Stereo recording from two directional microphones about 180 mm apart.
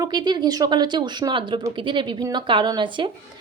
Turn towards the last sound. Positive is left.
turn(degrees=-25)  # may be behind; listen again after turning